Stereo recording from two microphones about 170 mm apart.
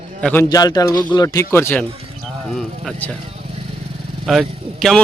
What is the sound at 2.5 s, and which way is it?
Speech, centre (ahead or behind).